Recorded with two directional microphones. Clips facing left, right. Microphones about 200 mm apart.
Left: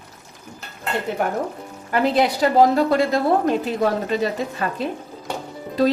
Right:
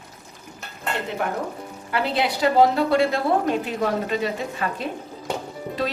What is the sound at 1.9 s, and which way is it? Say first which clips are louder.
A woman's voice: left 5 dB; 40° left (ahead or behind).